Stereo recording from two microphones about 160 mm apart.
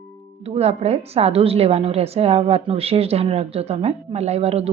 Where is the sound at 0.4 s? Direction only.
40° right (ahead or behind).